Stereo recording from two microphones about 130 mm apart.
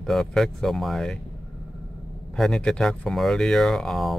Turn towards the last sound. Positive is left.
turn(degrees=0)  # may be behind; listen again after turning